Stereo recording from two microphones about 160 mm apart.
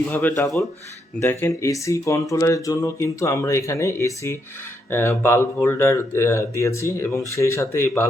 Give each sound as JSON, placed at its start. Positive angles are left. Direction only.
{"t": 0.1, "sound": "speech", "side_deg": 15}